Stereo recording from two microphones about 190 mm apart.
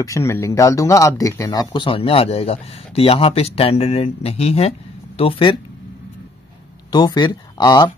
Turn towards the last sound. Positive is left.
turn(degrees=20)  # may be behind; listen again after turning